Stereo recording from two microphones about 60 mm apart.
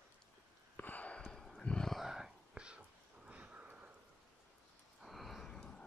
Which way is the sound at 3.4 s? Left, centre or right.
Right.